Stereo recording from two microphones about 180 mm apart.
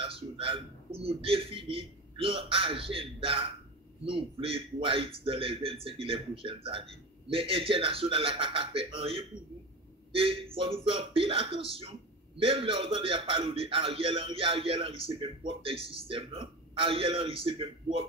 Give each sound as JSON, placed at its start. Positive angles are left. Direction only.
{"t": 0.0, "sound": "a man's voice", "side_deg": -30}